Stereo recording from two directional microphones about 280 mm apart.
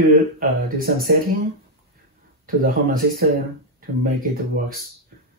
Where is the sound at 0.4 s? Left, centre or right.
Right.